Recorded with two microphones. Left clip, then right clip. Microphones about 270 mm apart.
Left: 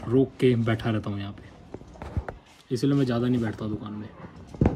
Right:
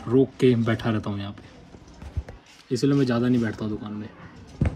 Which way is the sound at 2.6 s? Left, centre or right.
Centre.